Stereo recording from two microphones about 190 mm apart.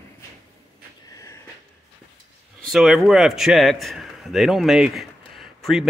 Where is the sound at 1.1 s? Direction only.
15° left (ahead or behind).